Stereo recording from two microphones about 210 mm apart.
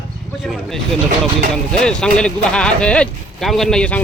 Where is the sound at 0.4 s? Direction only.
Centre (ahead or behind).